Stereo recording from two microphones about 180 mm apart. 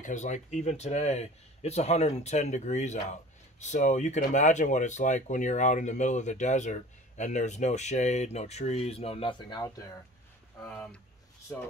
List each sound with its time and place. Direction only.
0.0 s speech: 45° left (ahead or behind); by 9.8 s 25° left (ahead or behind)
10.6 s speech: 10° left (ahead or behind)